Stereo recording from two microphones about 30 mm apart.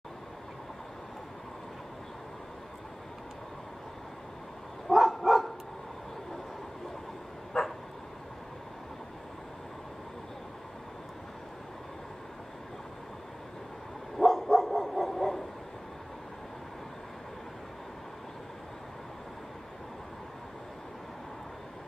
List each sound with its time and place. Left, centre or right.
4.8 s dog: centre
7.5 s bow-wow: centre
14.1 s dog: centre